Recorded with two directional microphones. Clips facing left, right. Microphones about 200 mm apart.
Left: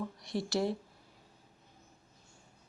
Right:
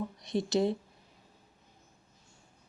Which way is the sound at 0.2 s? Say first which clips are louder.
Right 5 dB; 20° right (ahead or behind).